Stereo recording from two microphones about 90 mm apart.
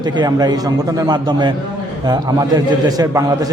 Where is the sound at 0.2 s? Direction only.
50° right (ahead or behind).